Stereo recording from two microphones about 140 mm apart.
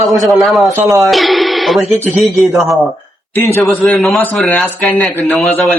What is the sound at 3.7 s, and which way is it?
Speech, 10° left (ahead or behind).